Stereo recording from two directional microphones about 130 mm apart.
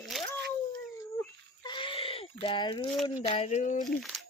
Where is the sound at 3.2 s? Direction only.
50° left (ahead or behind).